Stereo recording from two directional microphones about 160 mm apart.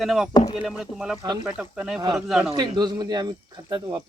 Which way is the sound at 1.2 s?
30° right (ahead or behind).